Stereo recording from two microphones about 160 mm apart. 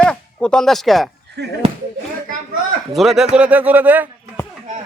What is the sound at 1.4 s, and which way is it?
Speech, 90° right.